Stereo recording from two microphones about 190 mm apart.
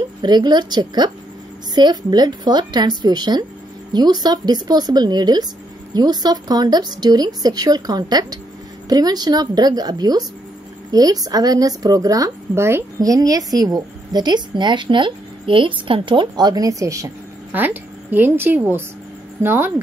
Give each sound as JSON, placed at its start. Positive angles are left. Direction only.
{"t": 0.2, "sound": "a woman's voice", "side_deg": -20}